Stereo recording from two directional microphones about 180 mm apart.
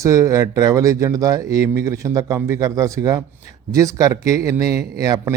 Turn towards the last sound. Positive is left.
turn(degrees=-20)  # may be behind; listen again after turning